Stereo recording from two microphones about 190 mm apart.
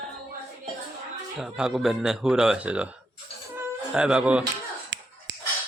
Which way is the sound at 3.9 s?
5° right (ahead or behind).